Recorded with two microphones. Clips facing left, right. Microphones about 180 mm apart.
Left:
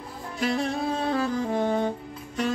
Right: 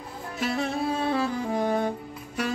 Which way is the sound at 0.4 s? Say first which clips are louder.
Left 1 dB; centre (ahead or behind).